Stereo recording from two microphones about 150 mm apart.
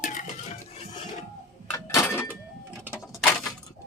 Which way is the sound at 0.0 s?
60° left (ahead or behind).